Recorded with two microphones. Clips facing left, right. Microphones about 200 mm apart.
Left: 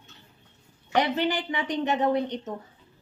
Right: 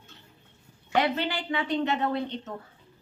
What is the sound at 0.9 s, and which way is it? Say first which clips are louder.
Speech: left 2 dB; 15° left (ahead or behind).